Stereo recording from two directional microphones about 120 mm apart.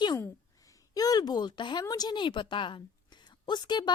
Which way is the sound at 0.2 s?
30° left (ahead or behind).